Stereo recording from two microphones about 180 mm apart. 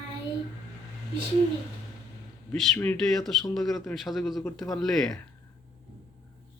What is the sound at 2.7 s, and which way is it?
A man's voice, 5° left (ahead or behind).